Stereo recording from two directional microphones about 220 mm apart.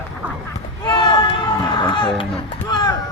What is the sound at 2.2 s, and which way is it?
Music, 20° left (ahead or behind).